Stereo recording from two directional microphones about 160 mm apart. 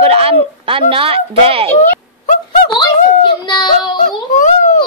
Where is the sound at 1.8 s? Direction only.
55° left (ahead or behind).